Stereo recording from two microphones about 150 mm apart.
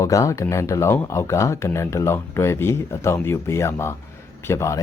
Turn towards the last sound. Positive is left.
turn(degrees=20)  # may be behind; listen again after turning